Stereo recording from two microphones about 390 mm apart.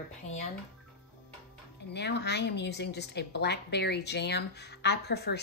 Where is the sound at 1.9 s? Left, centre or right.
Left.